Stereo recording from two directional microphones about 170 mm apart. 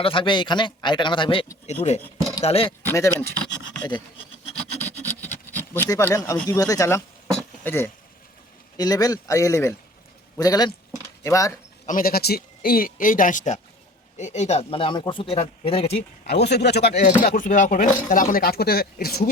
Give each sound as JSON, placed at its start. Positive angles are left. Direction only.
{"t": 0.0, "sound": "speech", "side_deg": 30}
{"t": 1.6, "sound": "speech", "side_deg": 40}
{"t": 2.8, "sound": "speech", "side_deg": 15}
{"t": 3.2, "sound": "a sound", "side_deg": 5}
{"t": 4.9, "sound": "a sound", "side_deg": 10}
{"t": 6.5, "sound": "speech", "side_deg": 20}
{"t": 11.9, "sound": "a man's voice", "side_deg": 55}
{"t": 16.2, "sound": "speech", "side_deg": 75}
{"t": 17.2, "sound": "a man's voice", "side_deg": 55}